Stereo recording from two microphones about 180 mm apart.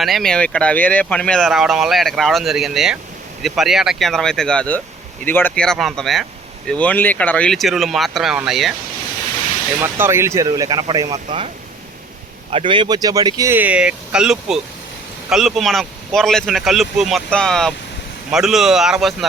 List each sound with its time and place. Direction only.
0.0 s speech: centre (ahead or behind)
9.8 s speech: 15° right (ahead or behind)
11.3 s speech: 35° right (ahead or behind); by 19.1 s centre (ahead or behind)